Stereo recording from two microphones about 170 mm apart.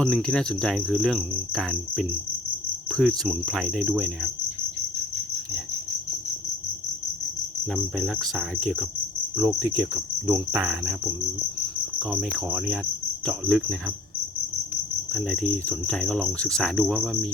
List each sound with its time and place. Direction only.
0.0 s cricket: 5° left (ahead or behind)
7.7 s cricket: centre (ahead or behind)
9.4 s cricket: 20° right (ahead or behind)
10.6 s cricket: 5° right (ahead or behind)
12.5 s cricket: 5° right (ahead or behind)
15.1 s cricket: 5° left (ahead or behind)